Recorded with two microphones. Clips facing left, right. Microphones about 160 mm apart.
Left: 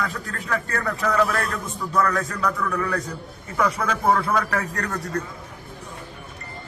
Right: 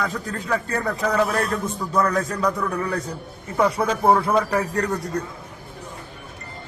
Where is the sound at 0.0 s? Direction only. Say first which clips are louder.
Right 3 dB; 20° right (ahead or behind).